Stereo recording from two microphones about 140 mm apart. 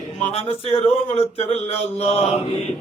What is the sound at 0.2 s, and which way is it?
A man's voice, 50° left (ahead or behind).